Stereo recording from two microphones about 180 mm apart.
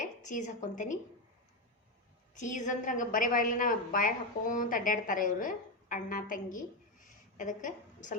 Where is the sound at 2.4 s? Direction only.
45° left (ahead or behind).